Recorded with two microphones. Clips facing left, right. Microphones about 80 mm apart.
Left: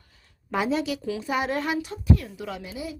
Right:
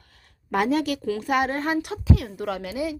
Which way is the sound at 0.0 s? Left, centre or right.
Right.